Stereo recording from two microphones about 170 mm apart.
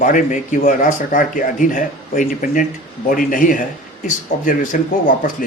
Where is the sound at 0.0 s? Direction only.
50° left (ahead or behind).